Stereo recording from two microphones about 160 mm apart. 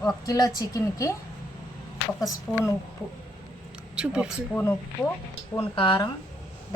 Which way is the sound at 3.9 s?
5° right (ahead or behind).